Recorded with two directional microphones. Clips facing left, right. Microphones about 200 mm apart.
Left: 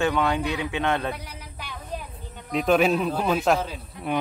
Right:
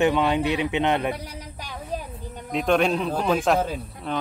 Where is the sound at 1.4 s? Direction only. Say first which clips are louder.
Right 3 dB; 40° right (ahead or behind).